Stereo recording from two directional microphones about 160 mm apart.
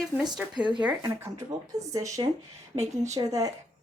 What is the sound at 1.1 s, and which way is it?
A woman's voice, 15° right (ahead or behind).